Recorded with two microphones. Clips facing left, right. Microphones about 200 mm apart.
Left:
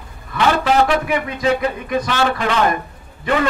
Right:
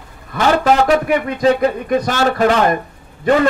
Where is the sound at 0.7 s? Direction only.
40° right (ahead or behind).